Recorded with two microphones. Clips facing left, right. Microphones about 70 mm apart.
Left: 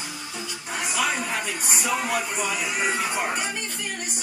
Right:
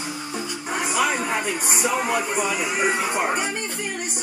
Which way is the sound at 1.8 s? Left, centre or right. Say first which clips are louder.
Right 3 dB; right.